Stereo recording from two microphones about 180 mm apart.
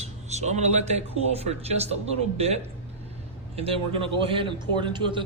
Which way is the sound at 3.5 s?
30° right (ahead or behind).